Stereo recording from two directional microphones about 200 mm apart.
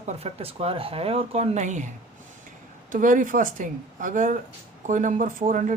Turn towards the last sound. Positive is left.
turn(degrees=-40)  # may be behind; listen again after turning